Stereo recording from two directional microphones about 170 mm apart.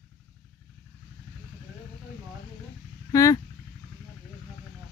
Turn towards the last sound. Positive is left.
turn(degrees=20)  # may be behind; listen again after turning